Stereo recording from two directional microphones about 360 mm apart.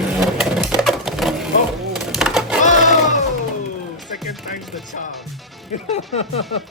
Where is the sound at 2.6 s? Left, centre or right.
Left.